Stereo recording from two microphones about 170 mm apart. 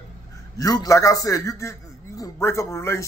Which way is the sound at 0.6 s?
20° left (ahead or behind).